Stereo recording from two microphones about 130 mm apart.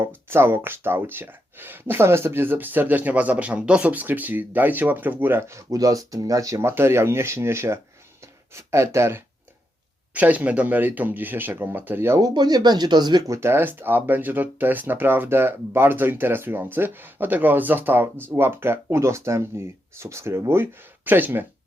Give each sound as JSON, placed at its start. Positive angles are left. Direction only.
{"t": 0.0, "sound": "speech", "side_deg": -15}
{"t": 12.2, "sound": "speech", "side_deg": -30}